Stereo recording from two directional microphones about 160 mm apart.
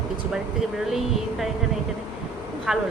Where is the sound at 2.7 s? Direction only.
5° right (ahead or behind).